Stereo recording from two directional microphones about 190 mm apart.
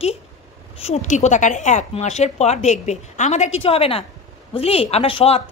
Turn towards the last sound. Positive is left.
turn(degrees=30)  # may be behind; listen again after turning